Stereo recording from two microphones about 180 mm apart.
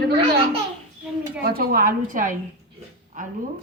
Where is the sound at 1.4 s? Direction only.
55° right (ahead or behind).